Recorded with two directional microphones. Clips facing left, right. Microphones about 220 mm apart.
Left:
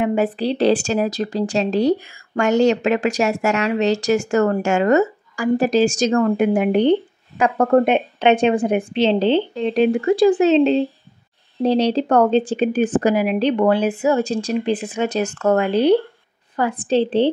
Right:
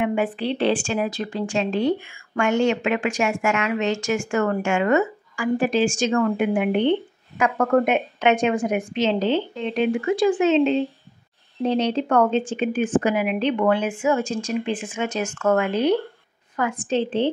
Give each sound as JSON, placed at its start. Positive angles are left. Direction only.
{"t": 0.0, "sound": "speech", "side_deg": 40}